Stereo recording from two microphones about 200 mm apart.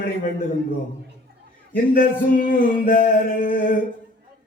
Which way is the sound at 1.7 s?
45° left (ahead or behind).